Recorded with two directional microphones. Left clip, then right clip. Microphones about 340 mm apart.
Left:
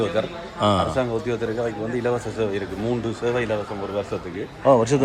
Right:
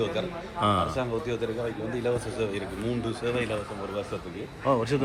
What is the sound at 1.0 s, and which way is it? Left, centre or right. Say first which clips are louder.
A man's voice: left 6 dB; left.